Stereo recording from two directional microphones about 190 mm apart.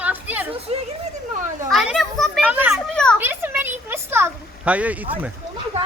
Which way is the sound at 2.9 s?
5° left (ahead or behind).